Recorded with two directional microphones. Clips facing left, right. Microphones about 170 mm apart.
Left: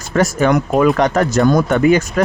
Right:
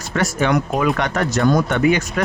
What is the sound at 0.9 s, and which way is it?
Speech, 40° left (ahead or behind).